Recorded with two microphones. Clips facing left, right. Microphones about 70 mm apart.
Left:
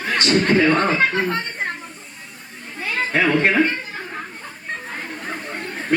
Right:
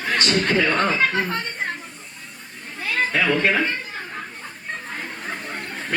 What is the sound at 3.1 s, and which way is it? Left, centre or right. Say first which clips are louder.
Speech: left 4 dB; left.